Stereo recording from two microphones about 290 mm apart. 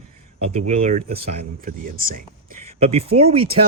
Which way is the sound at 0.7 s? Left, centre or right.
Right.